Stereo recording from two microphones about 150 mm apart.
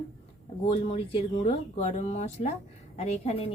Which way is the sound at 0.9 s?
40° left (ahead or behind).